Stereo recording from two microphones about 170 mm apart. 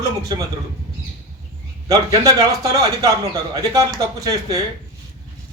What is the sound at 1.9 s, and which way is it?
A man's voice, 20° right (ahead or behind).